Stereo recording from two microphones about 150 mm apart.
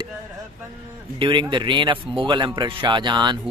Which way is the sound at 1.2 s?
30° right (ahead or behind).